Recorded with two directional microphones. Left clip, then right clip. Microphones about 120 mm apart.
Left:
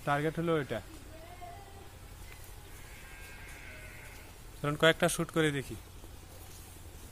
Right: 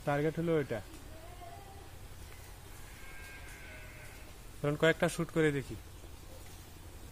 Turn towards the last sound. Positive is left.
turn(degrees=-5)  # may be behind; listen again after turning